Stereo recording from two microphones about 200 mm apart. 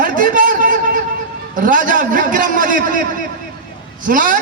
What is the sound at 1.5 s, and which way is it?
A man's voice, 40° right (ahead or behind).